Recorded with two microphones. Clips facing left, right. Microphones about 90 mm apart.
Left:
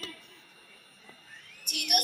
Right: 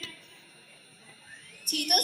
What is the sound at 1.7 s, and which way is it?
Speech, 40° right (ahead or behind).